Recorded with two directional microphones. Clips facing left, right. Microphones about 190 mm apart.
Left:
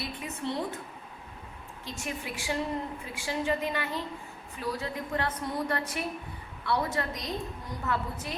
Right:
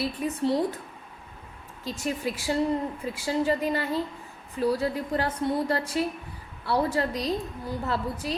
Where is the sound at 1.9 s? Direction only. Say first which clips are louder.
Right 7 dB; 35° right (ahead or behind).